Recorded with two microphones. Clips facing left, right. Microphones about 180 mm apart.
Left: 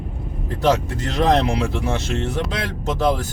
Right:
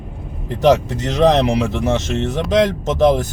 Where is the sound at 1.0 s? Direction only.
20° right (ahead or behind).